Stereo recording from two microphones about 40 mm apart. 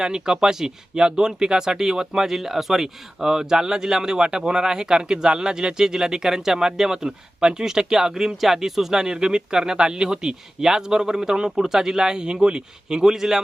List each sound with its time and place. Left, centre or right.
0.0 s speech: centre